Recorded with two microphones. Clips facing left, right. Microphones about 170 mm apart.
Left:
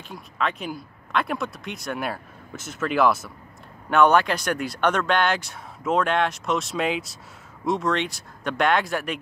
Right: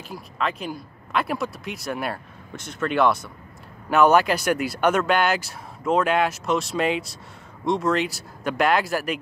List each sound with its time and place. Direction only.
0.1 s speech: centre (ahead or behind)